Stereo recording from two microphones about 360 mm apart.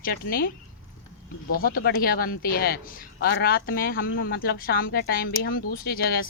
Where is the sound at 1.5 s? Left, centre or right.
Left.